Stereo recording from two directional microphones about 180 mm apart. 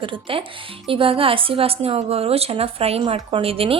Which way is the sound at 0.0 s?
30° right (ahead or behind).